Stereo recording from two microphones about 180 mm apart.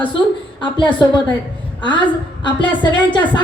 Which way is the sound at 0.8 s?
25° left (ahead or behind).